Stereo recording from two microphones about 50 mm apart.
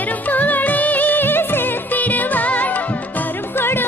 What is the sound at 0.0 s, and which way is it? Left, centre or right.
Music, left.